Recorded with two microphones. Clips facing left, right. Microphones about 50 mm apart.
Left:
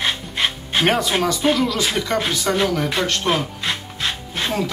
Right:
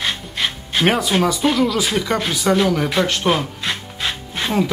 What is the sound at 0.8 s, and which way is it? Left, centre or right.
Speech, centre.